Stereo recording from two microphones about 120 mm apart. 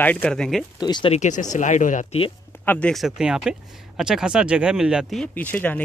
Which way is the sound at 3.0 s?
5° right (ahead or behind).